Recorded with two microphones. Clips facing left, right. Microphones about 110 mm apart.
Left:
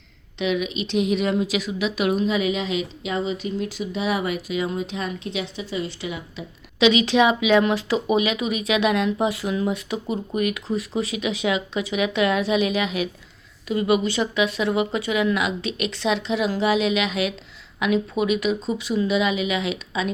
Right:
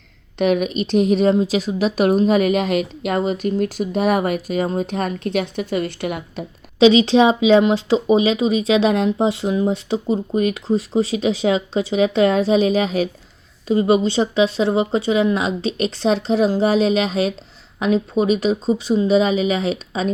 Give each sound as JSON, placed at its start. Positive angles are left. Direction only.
{"t": 0.3, "sound": "speech", "side_deg": -50}
{"t": 6.7, "sound": "speech", "side_deg": -30}